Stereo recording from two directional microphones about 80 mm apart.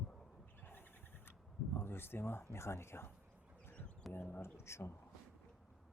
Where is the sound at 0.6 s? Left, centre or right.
Left.